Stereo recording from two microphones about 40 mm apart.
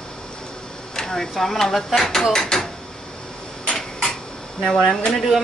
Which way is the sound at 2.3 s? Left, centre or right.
Centre.